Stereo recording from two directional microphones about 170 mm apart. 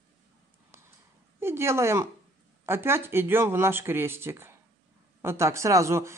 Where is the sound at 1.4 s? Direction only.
15° right (ahead or behind).